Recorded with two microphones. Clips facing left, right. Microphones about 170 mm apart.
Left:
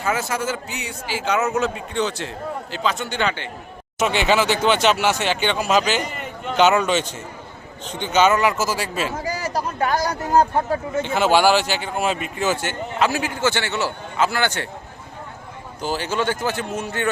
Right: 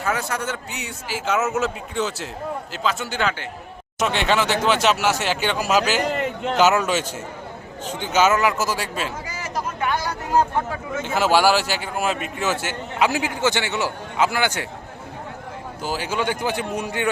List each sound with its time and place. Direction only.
0.0 s a man's voice: 5° left (ahead or behind)
6.0 s a man's voice: 80° right
6.6 s a man's voice: 5° right (ahead or behind)
9.2 s speech: 35° left (ahead or behind)
11.0 s a man's voice: 5° right (ahead or behind)
13.0 s a man's voice: 15° right (ahead or behind)
15.8 s a man's voice: 10° right (ahead or behind)